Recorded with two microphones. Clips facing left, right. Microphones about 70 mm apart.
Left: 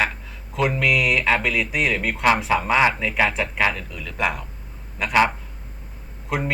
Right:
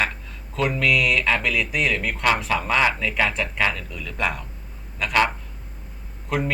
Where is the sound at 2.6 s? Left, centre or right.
Centre.